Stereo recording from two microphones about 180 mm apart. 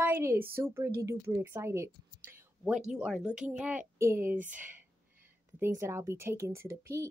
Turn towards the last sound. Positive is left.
turn(degrees=-15)  # may be behind; listen again after turning